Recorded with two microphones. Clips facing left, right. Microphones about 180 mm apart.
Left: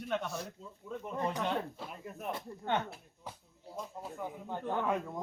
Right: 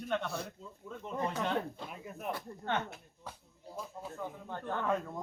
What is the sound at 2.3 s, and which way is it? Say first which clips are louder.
Speech: left 2 dB; 15° left (ahead or behind).